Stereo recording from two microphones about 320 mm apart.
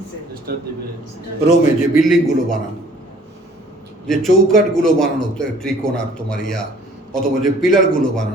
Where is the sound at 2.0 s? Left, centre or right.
Centre.